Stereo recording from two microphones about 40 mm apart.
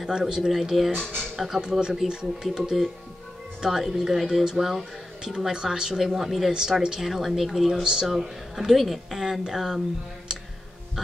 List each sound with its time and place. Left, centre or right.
0.2 s speech: centre
0.5 s speech: centre
0.9 s speech: centre
1.5 s speech: centre
5.2 s speech: centre
7.8 s speech: centre
8.1 s speech: centre